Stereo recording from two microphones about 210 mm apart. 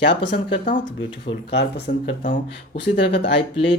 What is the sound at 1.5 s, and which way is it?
Speech, 55° left (ahead or behind).